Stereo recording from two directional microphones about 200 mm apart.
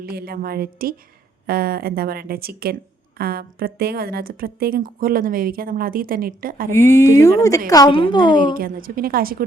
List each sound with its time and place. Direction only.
0.0 s speech: 50° right (ahead or behind)
6.7 s a woman's voice: 15° left (ahead or behind)
8.5 s speech: 45° right (ahead or behind)